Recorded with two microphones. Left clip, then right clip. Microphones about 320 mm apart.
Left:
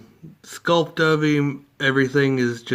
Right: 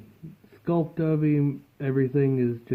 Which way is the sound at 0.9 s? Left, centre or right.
Centre.